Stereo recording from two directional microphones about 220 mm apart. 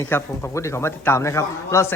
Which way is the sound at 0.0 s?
10° left (ahead or behind).